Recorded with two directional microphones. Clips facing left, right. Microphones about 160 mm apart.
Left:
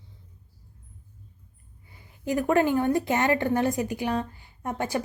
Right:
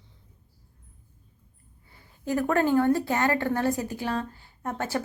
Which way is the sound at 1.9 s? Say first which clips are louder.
Even; 15° left (ahead or behind).